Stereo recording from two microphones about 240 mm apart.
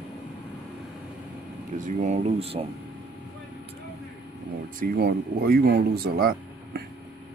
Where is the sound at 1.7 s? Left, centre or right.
Right.